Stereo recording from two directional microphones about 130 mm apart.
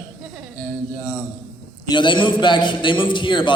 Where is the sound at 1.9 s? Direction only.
35° left (ahead or behind).